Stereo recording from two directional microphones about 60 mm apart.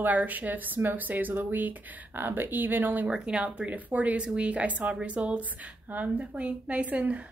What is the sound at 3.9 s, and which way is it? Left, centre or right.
Speech, right.